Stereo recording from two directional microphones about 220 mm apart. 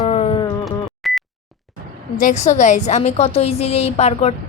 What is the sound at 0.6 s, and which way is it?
Beep, centre (ahead or behind).